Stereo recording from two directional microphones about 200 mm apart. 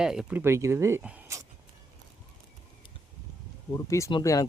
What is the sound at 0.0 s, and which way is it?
Speech, 5° right (ahead or behind).